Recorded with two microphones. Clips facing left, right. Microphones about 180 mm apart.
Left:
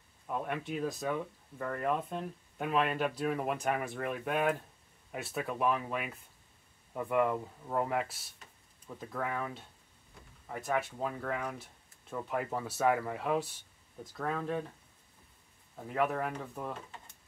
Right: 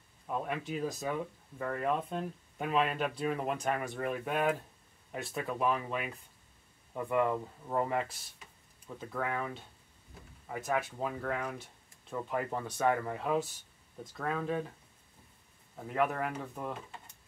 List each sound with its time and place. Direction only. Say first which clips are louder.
0.3 s speech: even; centre (ahead or behind)
15.7 s speech: even; centre (ahead or behind)